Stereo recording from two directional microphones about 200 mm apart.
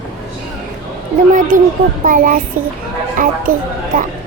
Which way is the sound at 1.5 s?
45° right (ahead or behind).